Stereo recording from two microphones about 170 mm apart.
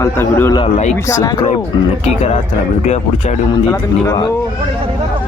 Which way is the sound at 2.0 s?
40° left (ahead or behind).